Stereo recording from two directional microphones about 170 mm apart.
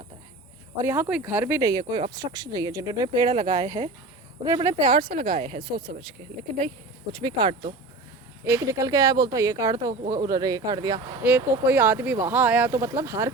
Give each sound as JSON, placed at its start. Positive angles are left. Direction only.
{"t": 0.8, "sound": "speech", "side_deg": -15}
{"t": 5.2, "sound": "speech", "side_deg": -45}
{"t": 5.6, "sound": "speech", "side_deg": -25}
{"t": 7.1, "sound": "speech", "side_deg": -25}
{"t": 11.2, "sound": "speech", "side_deg": -10}